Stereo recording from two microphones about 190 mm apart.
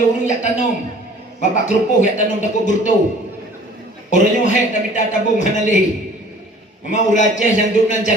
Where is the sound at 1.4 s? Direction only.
40° left (ahead or behind).